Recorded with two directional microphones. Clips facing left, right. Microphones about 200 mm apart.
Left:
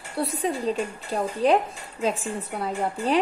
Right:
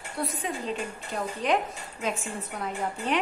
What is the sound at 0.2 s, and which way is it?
A woman's voice, 35° left (ahead or behind).